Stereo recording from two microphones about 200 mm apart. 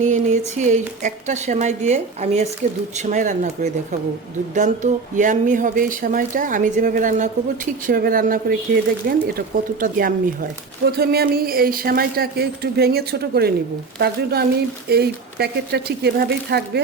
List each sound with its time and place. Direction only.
0.0 s speech: 35° right (ahead or behind)
10.8 s speech: 50° right (ahead or behind)